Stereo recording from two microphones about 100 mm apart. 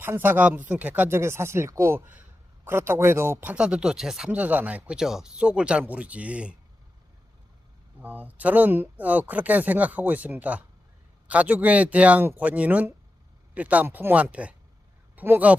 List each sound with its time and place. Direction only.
0.0 s speech: 20° right (ahead or behind); by 4.3 s 5° right (ahead or behind)
4.3 s speech: 15° right (ahead or behind)
8.0 s speech: 15° right (ahead or behind)